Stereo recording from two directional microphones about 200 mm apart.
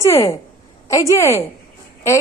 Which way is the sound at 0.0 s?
15° left (ahead or behind).